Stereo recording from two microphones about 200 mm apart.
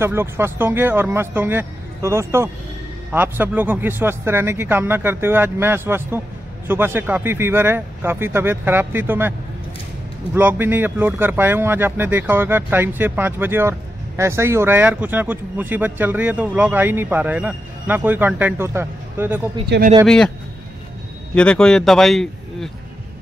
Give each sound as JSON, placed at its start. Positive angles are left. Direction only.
{"t": 0.0, "sound": "speech", "side_deg": -10}
{"t": 10.3, "sound": "speech", "side_deg": -10}
{"t": 19.7, "sound": "speech", "side_deg": -60}
{"t": 21.4, "sound": "a man's voice", "side_deg": 5}